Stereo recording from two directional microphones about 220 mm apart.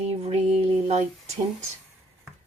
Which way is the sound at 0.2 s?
30° right (ahead or behind).